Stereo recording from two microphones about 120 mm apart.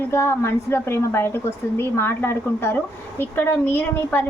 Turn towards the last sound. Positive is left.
turn(degrees=15)  # may be behind; listen again after turning